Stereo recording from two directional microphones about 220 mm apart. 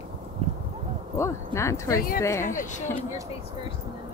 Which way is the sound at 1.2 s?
15° left (ahead or behind).